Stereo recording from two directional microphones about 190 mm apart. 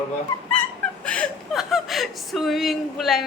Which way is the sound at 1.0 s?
5° left (ahead or behind).